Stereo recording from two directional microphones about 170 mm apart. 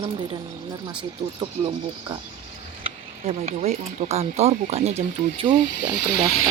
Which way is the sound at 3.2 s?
40° right (ahead or behind).